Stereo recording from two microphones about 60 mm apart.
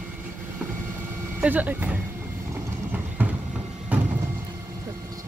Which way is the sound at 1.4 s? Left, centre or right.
Right.